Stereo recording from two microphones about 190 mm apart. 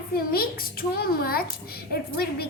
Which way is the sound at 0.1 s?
50° left (ahead or behind).